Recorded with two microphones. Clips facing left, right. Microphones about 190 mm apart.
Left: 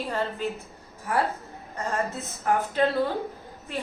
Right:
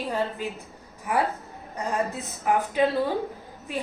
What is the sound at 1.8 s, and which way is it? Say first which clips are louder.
A woman's voice: right 1 dB; 15° right (ahead or behind).